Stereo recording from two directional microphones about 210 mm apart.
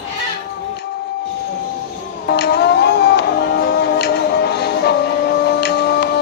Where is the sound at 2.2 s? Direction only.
50° left (ahead or behind).